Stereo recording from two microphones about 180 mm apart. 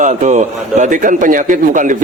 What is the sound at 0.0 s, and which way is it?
A man's voice, 40° right (ahead or behind).